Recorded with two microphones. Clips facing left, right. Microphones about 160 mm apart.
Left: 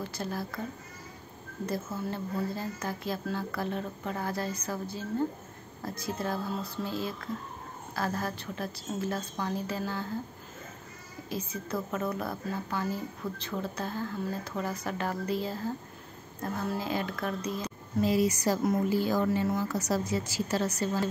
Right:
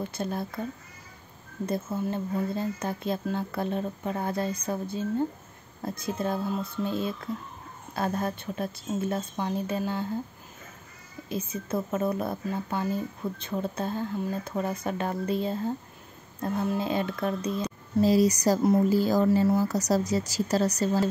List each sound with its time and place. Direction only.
0.0 s a woman's voice: 25° right (ahead or behind)
1.7 s a woman's voice: 20° right (ahead or behind)
5.8 s a woman's voice: 25° right (ahead or behind)
11.2 s a woman's voice: 25° right (ahead or behind)